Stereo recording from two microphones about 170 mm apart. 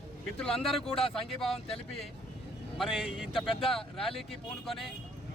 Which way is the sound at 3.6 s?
35° left (ahead or behind).